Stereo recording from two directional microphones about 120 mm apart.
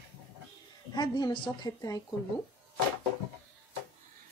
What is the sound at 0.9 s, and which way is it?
A woman's voice, 35° left (ahead or behind).